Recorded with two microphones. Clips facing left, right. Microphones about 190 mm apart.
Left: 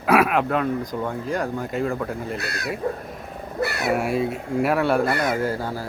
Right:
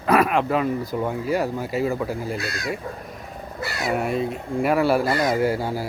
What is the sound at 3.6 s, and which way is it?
Speech, 60° left (ahead or behind).